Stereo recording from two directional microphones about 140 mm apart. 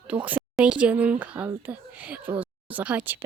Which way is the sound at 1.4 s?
10° right (ahead or behind).